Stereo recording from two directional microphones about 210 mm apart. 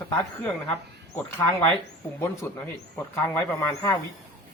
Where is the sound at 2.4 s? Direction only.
10° left (ahead or behind).